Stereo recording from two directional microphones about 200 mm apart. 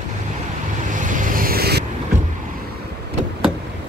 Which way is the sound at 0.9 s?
40° right (ahead or behind).